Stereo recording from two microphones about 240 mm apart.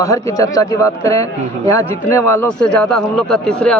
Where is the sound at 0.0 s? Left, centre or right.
Centre.